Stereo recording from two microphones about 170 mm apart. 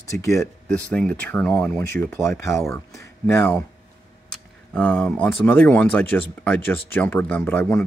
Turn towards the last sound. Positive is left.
turn(degrees=10)  # may be behind; listen again after turning